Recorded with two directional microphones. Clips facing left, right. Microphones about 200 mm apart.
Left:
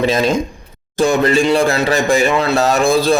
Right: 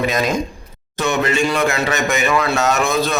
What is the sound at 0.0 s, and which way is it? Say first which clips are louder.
A man's voice: left 4 dB; 30° left (ahead or behind).